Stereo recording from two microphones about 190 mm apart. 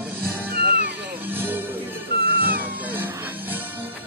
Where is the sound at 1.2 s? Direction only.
10° right (ahead or behind).